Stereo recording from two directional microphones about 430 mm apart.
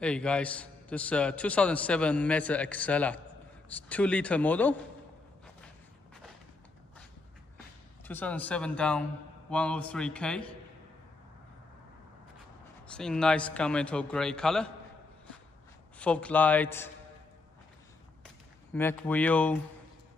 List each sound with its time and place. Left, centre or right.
0.0 s a man's voice: centre
8.0 s a man's voice: centre
12.8 s a man's voice: centre
16.0 s a man's voice: centre
18.2 s a sound: centre